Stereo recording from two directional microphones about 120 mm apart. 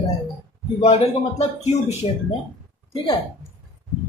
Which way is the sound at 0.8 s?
60° left (ahead or behind).